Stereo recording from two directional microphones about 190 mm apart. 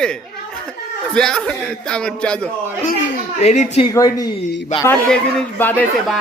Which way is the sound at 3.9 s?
20° left (ahead or behind).